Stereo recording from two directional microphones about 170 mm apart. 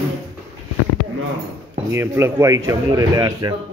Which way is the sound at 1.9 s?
15° right (ahead or behind).